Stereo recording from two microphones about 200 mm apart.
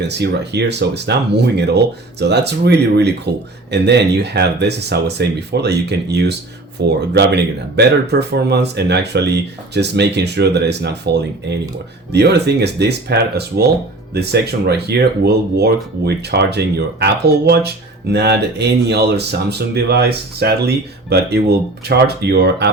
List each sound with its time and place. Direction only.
0.0 s speech: 55° right (ahead or behind)